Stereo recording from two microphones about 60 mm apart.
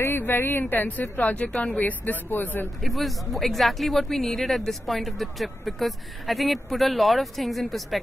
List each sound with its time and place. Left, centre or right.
0.0 s speech: left
1.1 s speech: left
2.8 s speech: centre